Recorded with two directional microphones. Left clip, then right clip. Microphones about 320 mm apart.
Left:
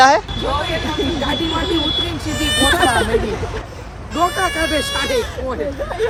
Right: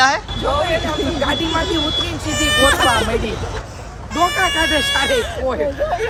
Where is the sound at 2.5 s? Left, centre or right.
Right.